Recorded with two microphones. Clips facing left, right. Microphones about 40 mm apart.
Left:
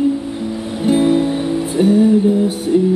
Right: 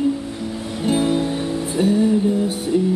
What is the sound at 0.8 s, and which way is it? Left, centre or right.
Music, centre.